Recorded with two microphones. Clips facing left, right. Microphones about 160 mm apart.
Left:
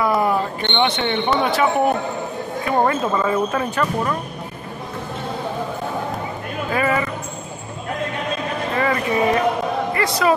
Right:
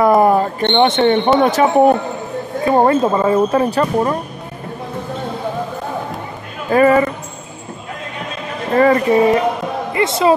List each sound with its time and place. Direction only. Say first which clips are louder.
0.0 s speech: right 7 dB; 50° right (ahead or behind)
6.7 s speech: right 10 dB; 40° right (ahead or behind)
8.7 s speech: right 9 dB; 40° right (ahead or behind)
9.9 s speech: right 6 dB; 25° right (ahead or behind)